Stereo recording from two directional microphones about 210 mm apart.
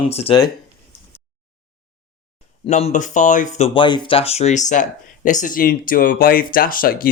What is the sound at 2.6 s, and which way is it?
Speech, 35° left (ahead or behind).